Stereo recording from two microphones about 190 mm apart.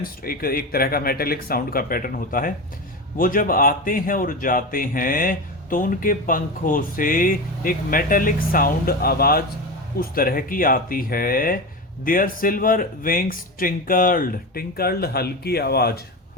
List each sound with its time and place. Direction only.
0.0 s speech: 50° left (ahead or behind)